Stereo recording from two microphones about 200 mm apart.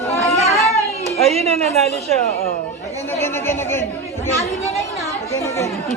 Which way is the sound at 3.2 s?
10° left (ahead or behind).